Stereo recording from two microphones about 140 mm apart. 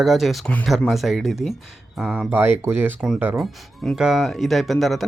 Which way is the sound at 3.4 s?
Centre (ahead or behind).